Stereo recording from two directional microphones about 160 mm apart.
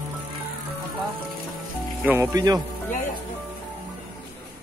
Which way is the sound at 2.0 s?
15° right (ahead or behind).